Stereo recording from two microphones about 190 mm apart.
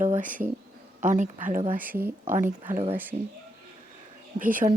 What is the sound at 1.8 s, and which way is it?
Speech, 10° right (ahead or behind).